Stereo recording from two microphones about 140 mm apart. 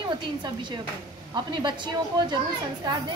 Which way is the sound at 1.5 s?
35° right (ahead or behind).